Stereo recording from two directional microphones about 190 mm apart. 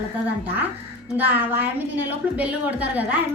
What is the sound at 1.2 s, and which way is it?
A woman's voice, 10° right (ahead or behind).